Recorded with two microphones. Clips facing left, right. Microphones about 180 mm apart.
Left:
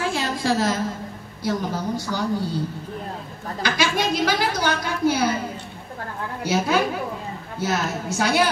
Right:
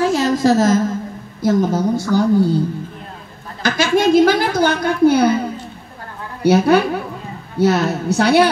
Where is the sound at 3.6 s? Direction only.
50° right (ahead or behind).